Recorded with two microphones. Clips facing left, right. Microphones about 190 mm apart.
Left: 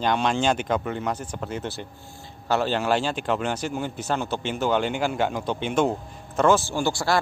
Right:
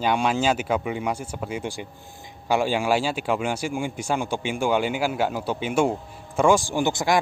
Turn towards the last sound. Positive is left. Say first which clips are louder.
# right 2 dB
turn(degrees=-15)  # may be behind; listen again after turning